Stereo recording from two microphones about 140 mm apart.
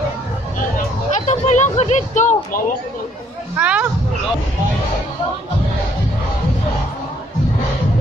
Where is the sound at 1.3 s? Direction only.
55° left (ahead or behind).